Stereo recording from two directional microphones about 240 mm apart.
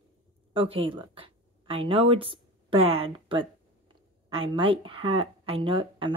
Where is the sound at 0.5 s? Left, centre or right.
Right.